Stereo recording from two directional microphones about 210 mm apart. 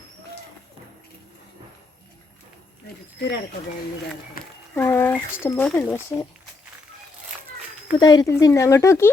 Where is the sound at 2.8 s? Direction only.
55° left (ahead or behind).